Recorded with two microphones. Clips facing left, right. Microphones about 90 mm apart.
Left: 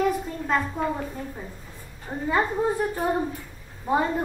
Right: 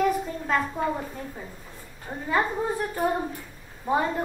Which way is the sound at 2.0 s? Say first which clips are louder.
Left 1 dB; 5° left (ahead or behind).